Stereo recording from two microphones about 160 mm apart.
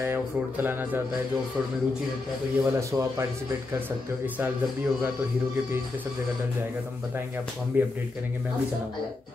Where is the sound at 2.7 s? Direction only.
20° right (ahead or behind).